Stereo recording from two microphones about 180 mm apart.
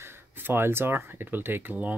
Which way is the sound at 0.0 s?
10° right (ahead or behind).